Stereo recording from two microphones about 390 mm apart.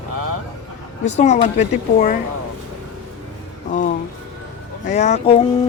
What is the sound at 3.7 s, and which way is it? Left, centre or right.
Speech, centre.